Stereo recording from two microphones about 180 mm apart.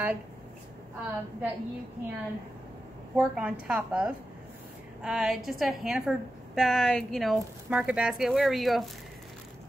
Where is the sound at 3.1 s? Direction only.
5° right (ahead or behind).